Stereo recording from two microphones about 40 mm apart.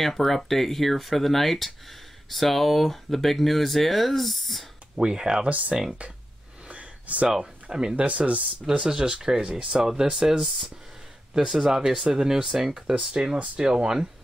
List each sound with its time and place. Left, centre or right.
0.0 s speech: centre
4.9 s speech: centre
5.5 s speech: right
6.7 s a sound: right
7.7 s speech: right
8.7 s speech: right
9.4 s speech: right
9.8 s speech: centre
11.3 s speech: centre
13.1 s speech: right